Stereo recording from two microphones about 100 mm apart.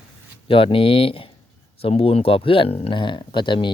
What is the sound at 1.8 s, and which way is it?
Speech, 75° left (ahead or behind).